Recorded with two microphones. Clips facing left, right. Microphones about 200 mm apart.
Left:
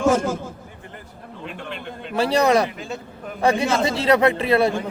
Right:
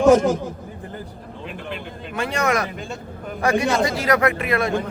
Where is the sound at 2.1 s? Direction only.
35° left (ahead or behind).